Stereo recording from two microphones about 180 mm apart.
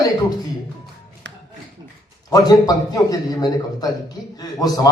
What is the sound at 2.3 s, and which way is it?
A man's voice, 20° left (ahead or behind).